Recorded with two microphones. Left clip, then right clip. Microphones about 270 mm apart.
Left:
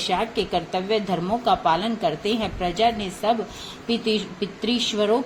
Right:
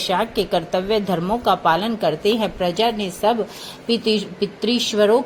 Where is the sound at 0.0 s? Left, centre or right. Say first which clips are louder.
Right 3 dB; right.